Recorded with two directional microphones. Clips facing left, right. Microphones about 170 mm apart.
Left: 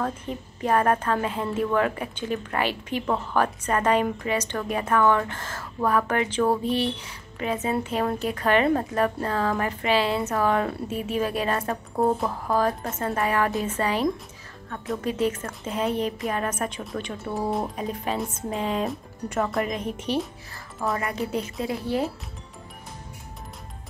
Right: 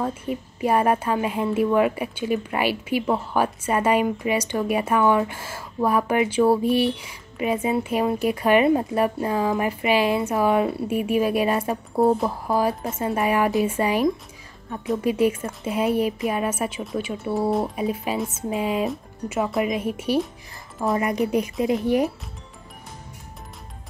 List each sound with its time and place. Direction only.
0.0 s speech: 10° right (ahead or behind)